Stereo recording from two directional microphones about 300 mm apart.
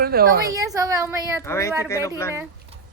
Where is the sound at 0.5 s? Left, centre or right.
Centre.